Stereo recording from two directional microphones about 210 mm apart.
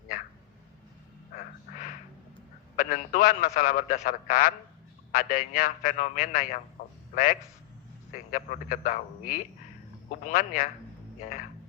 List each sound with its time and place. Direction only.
2.7 s a man's voice: 40° left (ahead or behind)
6.8 s a sound: 40° left (ahead or behind)
8.1 s a man's voice: 40° left (ahead or behind)